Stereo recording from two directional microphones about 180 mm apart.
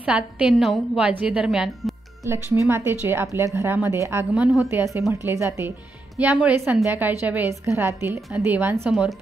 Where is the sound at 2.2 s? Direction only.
15° right (ahead or behind).